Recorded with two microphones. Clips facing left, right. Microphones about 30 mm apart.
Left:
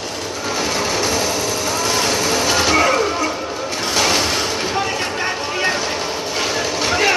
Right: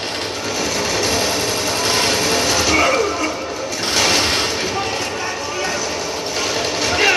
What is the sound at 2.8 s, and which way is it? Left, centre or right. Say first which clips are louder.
Music: even; centre.